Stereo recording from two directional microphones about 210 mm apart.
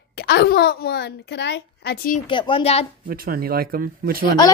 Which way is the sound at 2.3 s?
25° left (ahead or behind).